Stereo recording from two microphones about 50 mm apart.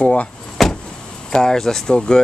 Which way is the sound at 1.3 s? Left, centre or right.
Centre.